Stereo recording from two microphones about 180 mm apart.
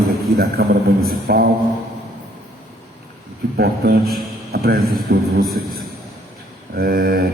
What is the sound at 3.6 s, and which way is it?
A man's voice, 60° right (ahead or behind).